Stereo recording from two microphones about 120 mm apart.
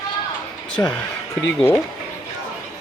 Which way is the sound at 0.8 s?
25° left (ahead or behind).